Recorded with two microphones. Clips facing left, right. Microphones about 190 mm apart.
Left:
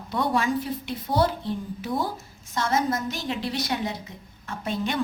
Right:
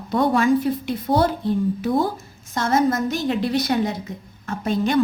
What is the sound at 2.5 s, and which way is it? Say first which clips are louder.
A woman's voice: right 5 dB; 45° right (ahead or behind).